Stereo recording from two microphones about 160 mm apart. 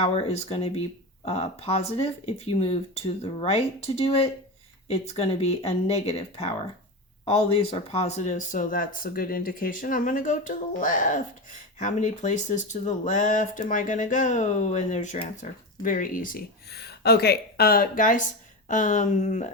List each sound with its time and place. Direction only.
0.0 s speech: 40° left (ahead or behind)